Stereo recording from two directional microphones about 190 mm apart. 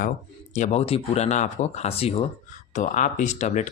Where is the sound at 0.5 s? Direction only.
35° left (ahead or behind).